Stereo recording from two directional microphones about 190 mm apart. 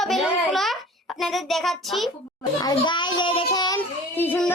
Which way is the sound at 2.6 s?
20° left (ahead or behind).